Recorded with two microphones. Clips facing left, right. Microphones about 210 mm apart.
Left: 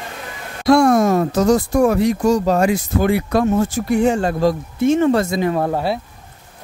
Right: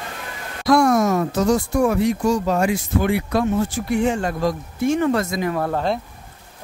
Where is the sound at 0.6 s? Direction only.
25° left (ahead or behind).